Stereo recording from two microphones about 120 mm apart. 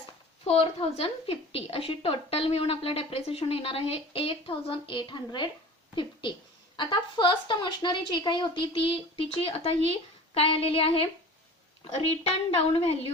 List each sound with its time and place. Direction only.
0.4 s a woman's voice: 55° left (ahead or behind)
12.5 s a woman's voice: 55° left (ahead or behind)